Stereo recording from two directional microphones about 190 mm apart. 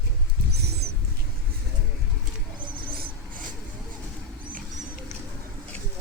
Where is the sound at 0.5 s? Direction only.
60° right (ahead or behind).